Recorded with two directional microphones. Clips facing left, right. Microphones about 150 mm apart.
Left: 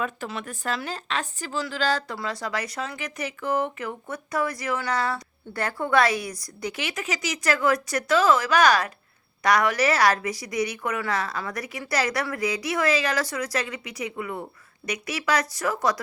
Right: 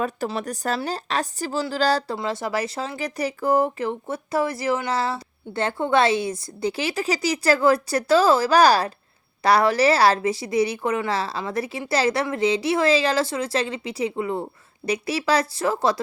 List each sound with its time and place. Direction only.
0.0 s speech: 35° right (ahead or behind)
2.1 s speech: 25° right (ahead or behind)